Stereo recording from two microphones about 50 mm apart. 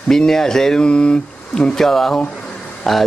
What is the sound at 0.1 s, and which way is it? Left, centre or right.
Speech, centre.